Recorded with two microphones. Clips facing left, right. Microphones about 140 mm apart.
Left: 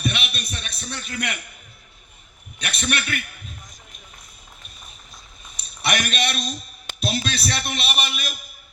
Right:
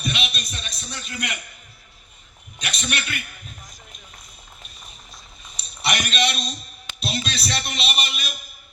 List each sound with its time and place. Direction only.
0.0 s a sound: 55° left (ahead or behind)
2.6 s a man's voice: 55° left (ahead or behind)
5.8 s a man's voice: 50° left (ahead or behind)